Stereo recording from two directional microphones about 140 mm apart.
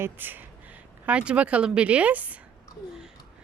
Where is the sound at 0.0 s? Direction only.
15° right (ahead or behind).